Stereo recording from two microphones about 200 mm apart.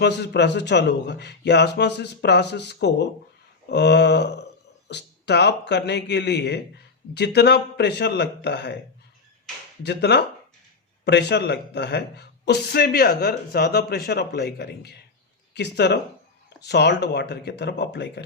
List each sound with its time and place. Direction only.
0.0 s speech: 55° left (ahead or behind)
9.8 s speech: 55° left (ahead or behind)